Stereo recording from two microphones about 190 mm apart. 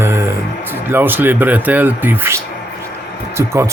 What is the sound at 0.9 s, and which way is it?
Speech, 10° right (ahead or behind).